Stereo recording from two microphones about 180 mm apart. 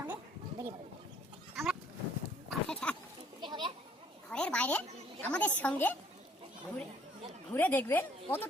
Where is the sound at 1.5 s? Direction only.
Centre (ahead or behind).